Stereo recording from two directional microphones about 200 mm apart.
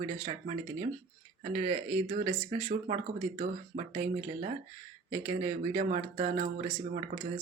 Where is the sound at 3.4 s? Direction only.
35° right (ahead or behind).